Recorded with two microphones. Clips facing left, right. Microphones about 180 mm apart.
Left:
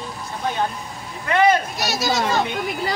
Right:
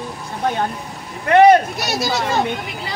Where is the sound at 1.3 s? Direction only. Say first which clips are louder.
Right 7 dB; 60° right (ahead or behind).